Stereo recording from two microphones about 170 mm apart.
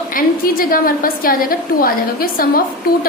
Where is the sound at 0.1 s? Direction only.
55° left (ahead or behind).